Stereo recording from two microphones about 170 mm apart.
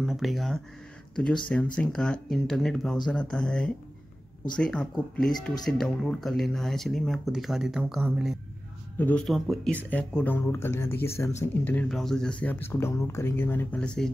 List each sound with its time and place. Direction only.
0.0 s speech: centre (ahead or behind)
8.9 s speech: 10° left (ahead or behind)